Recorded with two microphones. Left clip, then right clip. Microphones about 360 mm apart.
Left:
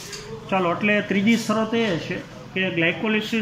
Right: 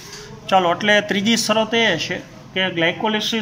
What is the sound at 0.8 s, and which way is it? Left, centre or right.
Speech, right.